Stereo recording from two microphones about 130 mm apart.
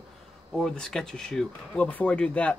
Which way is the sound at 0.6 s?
5° left (ahead or behind).